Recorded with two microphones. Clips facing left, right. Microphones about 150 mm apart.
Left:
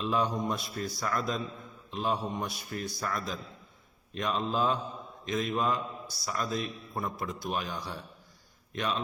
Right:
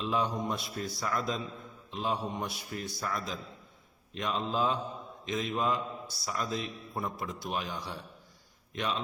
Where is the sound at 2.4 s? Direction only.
25° right (ahead or behind).